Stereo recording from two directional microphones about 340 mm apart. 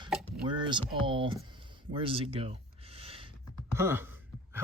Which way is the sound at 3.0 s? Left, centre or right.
Centre.